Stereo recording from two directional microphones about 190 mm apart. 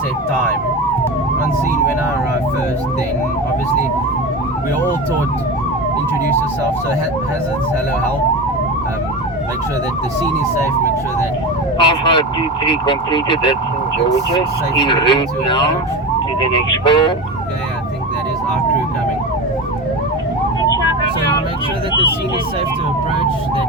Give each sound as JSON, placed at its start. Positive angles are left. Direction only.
{"t": 11.8, "sound": "speech", "side_deg": 25}
{"t": 14.8, "sound": "speech", "side_deg": 25}